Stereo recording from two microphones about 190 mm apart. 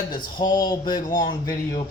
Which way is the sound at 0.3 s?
20° left (ahead or behind).